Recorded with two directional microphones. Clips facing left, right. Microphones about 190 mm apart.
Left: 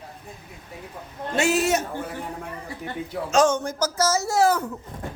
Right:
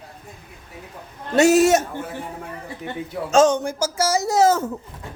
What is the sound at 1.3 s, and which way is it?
Speech, 40° right (ahead or behind).